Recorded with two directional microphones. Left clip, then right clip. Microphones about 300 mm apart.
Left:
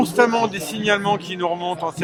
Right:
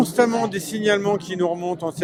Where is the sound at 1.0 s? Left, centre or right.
Right.